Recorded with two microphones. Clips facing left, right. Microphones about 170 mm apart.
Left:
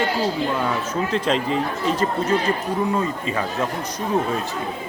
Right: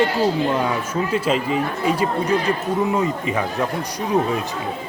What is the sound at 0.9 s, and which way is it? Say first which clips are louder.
A man's voice: right 1 dB; 10° right (ahead or behind).